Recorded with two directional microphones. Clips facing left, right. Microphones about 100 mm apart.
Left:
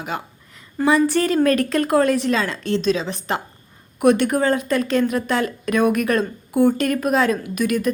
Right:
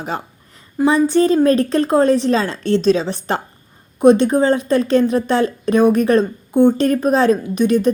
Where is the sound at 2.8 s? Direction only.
35° right (ahead or behind).